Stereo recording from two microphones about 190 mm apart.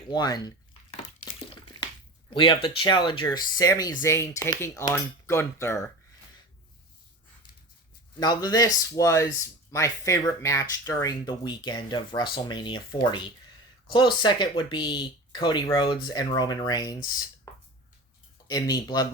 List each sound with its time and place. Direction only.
0.1 s a sound: 20° left (ahead or behind)
2.3 s speech: 25° left (ahead or behind)
8.2 s speech: 20° left (ahead or behind)